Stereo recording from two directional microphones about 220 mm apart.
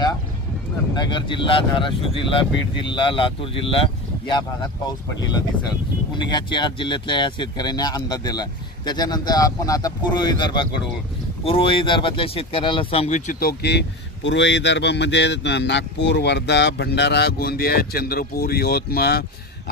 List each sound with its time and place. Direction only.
0.9 s speech: 20° left (ahead or behind); by 19.2 s 45° left (ahead or behind)